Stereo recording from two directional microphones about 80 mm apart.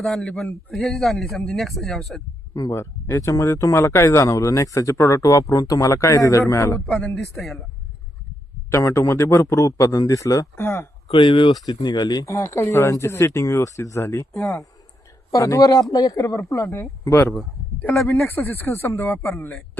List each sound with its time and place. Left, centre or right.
0.0 s a man's voice: centre
2.7 s speech: left
6.9 s speech: centre
7.2 s a man's voice: centre
8.7 s speech: left
11.2 s speech: left
11.6 s speech: left
12.2 s speech: left
15.3 s speech: left
18.3 s speech: left